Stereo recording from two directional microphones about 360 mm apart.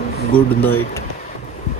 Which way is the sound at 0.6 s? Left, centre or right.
Left.